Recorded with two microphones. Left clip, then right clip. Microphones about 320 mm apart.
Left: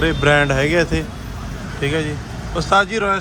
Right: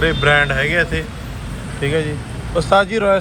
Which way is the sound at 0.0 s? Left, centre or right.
Centre.